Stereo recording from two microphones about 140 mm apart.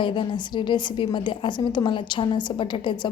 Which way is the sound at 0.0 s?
35° left (ahead or behind).